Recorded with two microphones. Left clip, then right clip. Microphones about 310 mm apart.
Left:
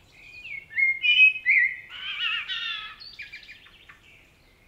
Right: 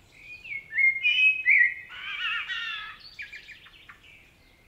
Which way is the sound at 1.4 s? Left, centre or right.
Right.